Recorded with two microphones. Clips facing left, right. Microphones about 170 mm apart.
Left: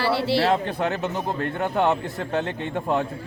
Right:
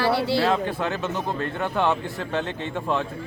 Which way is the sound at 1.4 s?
45° left (ahead or behind).